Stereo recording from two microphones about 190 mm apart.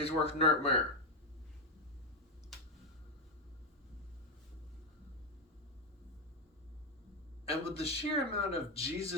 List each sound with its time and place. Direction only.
0.0 s speech: 30° left (ahead or behind)
7.4 s speech: 30° left (ahead or behind)